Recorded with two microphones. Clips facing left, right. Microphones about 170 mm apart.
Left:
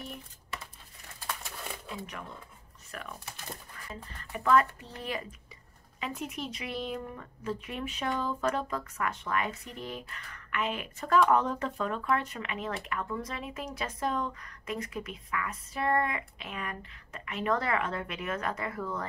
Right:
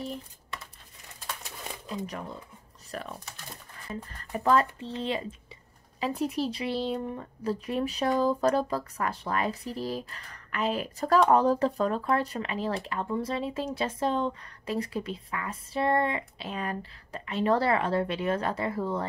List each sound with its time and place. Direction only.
2.9 s speech: 35° right (ahead or behind)
4.2 s a woman's voice: 35° right (ahead or behind)